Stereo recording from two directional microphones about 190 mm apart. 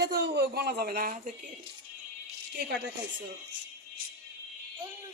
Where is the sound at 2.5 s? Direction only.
60° right (ahead or behind).